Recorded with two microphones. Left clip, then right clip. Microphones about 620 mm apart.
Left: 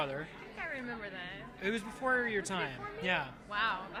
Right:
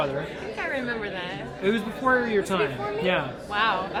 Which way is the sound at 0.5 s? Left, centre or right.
Left.